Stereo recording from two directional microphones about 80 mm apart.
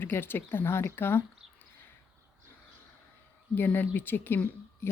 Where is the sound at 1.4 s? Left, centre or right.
Centre.